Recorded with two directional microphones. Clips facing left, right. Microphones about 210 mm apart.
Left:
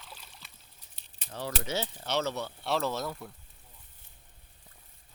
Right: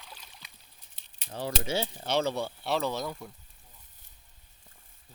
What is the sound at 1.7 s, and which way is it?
Speech, 10° right (ahead or behind).